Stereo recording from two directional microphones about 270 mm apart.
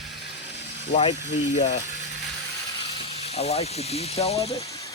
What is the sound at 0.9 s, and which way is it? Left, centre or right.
Speech, left.